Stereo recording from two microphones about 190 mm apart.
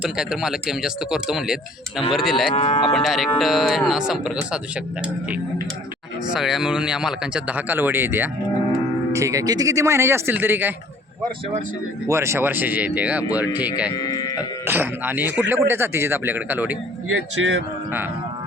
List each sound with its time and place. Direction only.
0.0 s speech: 5° right (ahead or behind)
2.5 s cattle: 35° left (ahead or behind)
2.9 s speech: centre (ahead or behind)
6.3 s speech: 5° right (ahead or behind)
12.0 s speech: 15° right (ahead or behind)
13.9 s speech: 20° left (ahead or behind)
14.7 s speech: 10° right (ahead or behind)
17.4 s speech: 80° right